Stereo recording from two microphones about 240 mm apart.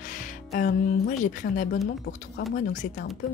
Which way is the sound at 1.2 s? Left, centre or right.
Left.